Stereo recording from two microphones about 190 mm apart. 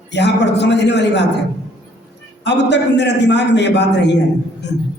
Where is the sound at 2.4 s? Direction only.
65° left (ahead or behind).